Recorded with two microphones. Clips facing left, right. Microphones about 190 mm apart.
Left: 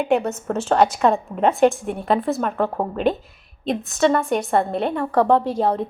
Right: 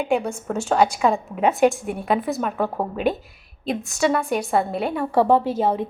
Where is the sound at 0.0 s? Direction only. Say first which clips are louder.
Left 2 dB; 10° right (ahead or behind).